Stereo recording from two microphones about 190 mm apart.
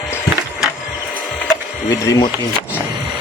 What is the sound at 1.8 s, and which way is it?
Speech, 20° left (ahead or behind).